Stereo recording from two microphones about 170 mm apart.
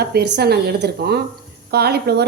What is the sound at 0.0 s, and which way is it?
A woman's voice, 70° right (ahead or behind).